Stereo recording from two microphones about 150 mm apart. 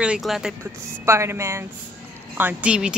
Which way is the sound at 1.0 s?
20° right (ahead or behind).